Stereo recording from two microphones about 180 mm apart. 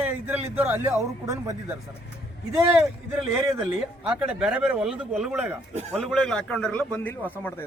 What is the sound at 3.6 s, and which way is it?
Speech, 5° right (ahead or behind).